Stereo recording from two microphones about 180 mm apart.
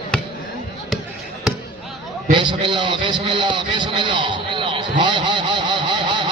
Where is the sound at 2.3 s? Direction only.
25° right (ahead or behind).